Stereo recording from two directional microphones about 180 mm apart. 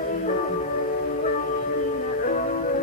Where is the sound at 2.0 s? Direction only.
50° left (ahead or behind).